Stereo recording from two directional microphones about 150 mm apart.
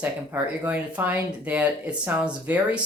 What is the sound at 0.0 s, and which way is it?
Speech, 10° right (ahead or behind).